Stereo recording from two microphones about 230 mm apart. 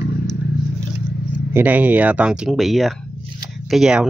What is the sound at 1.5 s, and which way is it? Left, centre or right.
A man's voice, centre.